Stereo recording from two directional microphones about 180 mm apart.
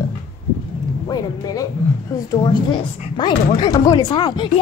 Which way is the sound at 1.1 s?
20° left (ahead or behind).